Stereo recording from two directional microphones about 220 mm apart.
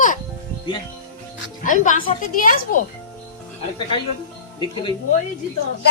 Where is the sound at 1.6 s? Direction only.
35° left (ahead or behind).